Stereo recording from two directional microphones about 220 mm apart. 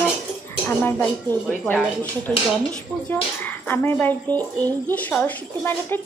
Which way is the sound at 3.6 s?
10° left (ahead or behind).